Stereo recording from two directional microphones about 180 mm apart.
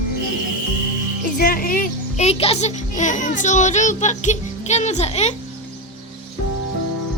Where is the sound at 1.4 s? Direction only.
55° left (ahead or behind).